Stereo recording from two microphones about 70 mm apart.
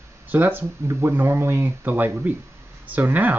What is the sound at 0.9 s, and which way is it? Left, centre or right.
Speech, right.